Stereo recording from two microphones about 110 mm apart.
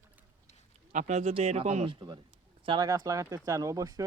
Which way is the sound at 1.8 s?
40° right (ahead or behind).